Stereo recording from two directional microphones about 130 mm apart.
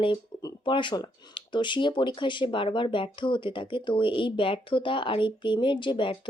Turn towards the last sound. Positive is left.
turn(degrees=40)  # may be behind; listen again after turning